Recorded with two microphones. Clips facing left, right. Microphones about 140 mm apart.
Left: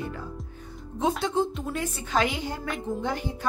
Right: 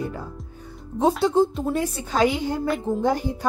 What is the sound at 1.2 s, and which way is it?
A woman's voice, 35° right (ahead or behind).